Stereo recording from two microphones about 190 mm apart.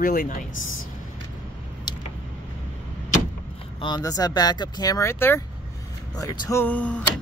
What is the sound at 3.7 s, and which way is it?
Speech, 25° left (ahead or behind).